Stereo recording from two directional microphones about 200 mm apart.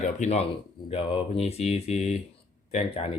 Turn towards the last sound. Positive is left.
turn(degrees=30)  # may be behind; listen again after turning